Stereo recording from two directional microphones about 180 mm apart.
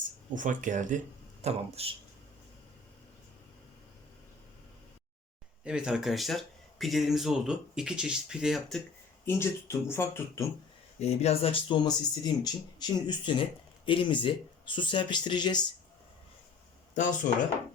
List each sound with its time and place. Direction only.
0.3 s speech: 45° right (ahead or behind)
5.6 s speech: 5° right (ahead or behind)
9.2 s speech: 15° left (ahead or behind)
11.0 s speech: 35° left (ahead or behind)
16.9 s speech: 45° left (ahead or behind)